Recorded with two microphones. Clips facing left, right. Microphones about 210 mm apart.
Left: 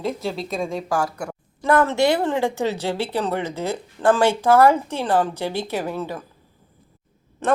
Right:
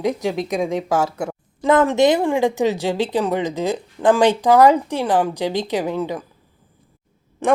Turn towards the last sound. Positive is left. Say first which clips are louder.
# right 3 dB
turn(degrees=-15)  # may be behind; listen again after turning